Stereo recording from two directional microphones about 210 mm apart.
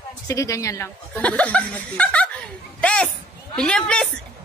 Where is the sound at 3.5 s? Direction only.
5° left (ahead or behind).